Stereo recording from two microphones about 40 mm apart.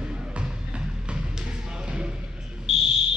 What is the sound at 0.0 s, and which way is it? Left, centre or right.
Music, right.